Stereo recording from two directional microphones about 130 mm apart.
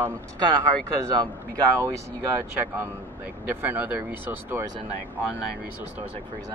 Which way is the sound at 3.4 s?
15° right (ahead or behind).